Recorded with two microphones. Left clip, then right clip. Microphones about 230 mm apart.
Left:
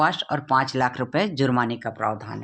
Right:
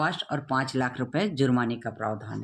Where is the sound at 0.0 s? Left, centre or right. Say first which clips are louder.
Left 6 dB; left.